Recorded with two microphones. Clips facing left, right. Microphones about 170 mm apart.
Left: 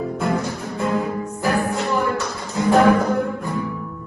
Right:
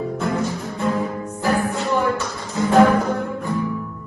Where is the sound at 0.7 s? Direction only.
Centre (ahead or behind).